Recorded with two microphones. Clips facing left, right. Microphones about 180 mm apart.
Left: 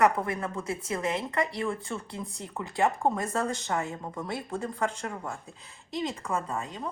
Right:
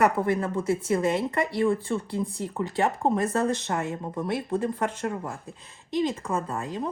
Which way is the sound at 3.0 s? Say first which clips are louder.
Right 4 dB; 25° right (ahead or behind).